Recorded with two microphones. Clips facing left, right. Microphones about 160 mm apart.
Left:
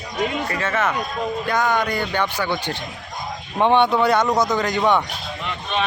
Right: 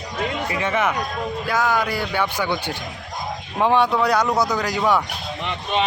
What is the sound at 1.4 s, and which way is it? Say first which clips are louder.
Speech: even; centre (ahead or behind).